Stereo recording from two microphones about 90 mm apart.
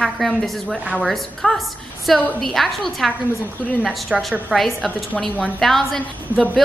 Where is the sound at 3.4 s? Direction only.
15° left (ahead or behind).